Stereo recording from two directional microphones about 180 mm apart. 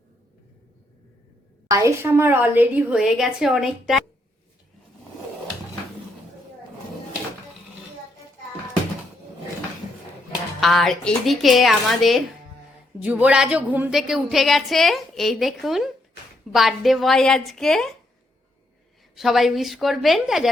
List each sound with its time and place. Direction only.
1.6 s a woman's voice: 20° right (ahead or behind); by 4.0 s centre (ahead or behind)
10.6 s a woman's voice: centre (ahead or behind)
19.1 s a woman's voice: centre (ahead or behind)